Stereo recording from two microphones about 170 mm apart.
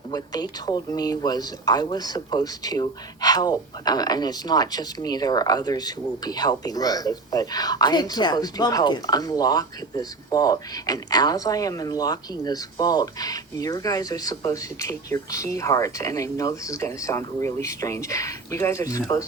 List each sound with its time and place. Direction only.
0.1 s speech: 25° left (ahead or behind)